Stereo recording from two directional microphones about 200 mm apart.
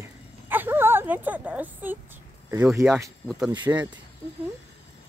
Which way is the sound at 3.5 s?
20° right (ahead or behind).